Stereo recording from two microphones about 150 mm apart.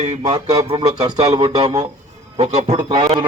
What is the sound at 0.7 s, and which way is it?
Speech, 30° right (ahead or behind).